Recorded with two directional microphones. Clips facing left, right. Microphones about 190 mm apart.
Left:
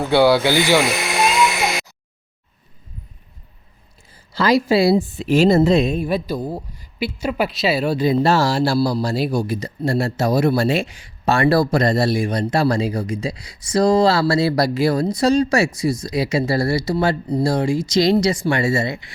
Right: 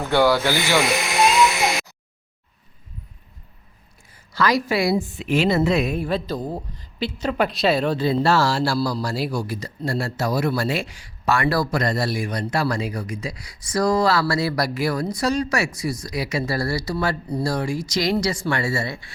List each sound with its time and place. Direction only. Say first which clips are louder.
0.1 s speech: left 4 dB; 15° left (ahead or behind)
4.1 s speech: left 4 dB; 30° left (ahead or behind)
5.7 s speech: left 5 dB; 25° left (ahead or behind)
6.0 s speech: left 3 dB; 15° left (ahead or behind)